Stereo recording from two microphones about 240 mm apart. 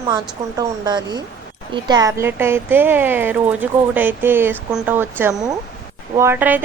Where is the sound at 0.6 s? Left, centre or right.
Centre.